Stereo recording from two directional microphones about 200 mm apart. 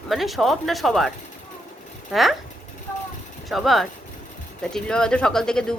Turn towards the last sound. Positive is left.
turn(degrees=5)  # may be behind; listen again after turning